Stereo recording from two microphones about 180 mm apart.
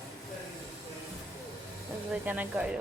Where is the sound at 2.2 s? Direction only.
10° right (ahead or behind).